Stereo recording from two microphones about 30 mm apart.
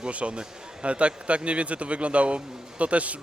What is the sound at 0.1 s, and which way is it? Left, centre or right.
A man's voice, right.